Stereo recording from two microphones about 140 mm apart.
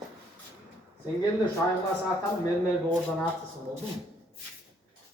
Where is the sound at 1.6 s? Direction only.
20° left (ahead or behind).